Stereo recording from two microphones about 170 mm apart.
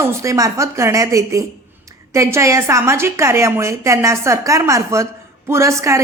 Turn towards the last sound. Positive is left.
turn(degrees=-15)  # may be behind; listen again after turning